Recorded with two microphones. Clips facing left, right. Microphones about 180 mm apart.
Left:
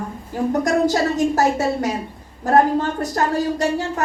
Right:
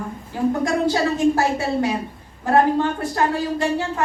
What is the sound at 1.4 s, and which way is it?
A woman's voice, 45° left (ahead or behind).